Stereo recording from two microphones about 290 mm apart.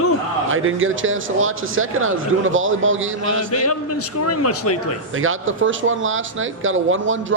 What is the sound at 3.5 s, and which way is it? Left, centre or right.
A man's voice, left.